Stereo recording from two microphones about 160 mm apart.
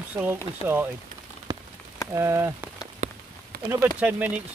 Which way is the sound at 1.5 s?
20° right (ahead or behind).